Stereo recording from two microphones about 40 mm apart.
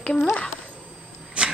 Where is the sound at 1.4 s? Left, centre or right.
Right.